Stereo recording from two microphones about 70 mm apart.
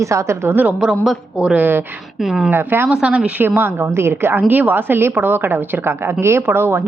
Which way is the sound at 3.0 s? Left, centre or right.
Centre.